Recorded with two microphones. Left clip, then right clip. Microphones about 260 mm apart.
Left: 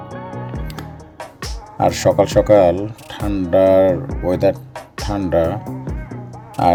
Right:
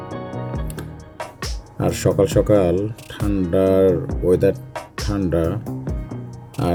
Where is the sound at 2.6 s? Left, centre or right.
Centre.